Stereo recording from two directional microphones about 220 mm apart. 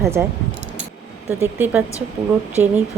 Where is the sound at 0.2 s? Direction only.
5° right (ahead or behind).